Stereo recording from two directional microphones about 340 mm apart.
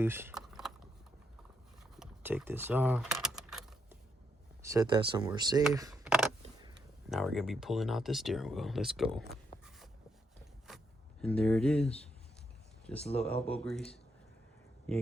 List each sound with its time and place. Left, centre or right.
0.0 s a sound: centre
2.0 s typing: centre
4.7 s speech: centre
11.2 s speech: centre
13.0 s speech: centre
13.7 s speech: centre